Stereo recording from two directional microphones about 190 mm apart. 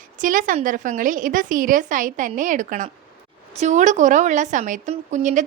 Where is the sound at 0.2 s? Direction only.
45° right (ahead or behind).